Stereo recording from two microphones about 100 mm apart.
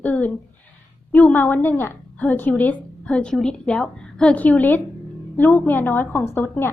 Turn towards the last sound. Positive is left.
turn(degrees=25)  # may be behind; listen again after turning